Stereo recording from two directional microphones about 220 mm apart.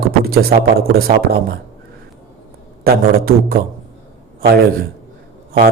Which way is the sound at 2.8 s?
45° right (ahead or behind).